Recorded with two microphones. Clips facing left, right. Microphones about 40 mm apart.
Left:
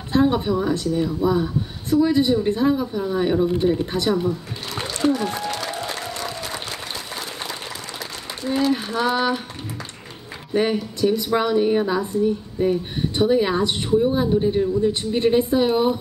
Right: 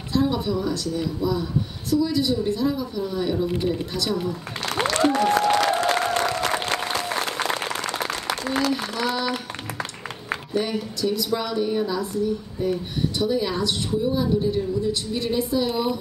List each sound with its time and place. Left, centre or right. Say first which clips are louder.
0.1 s a woman's voice: left 4 dB; left
4.6 s applause: right 6 dB; right
4.9 s applause: right 2 dB; right
8.3 s a sound: left 4 dB; right
8.7 s a sound: left 4 dB; left
10.5 s a woman's voice: left 6 dB; left